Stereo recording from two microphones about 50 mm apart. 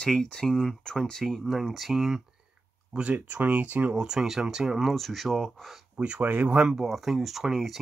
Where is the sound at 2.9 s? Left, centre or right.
Right.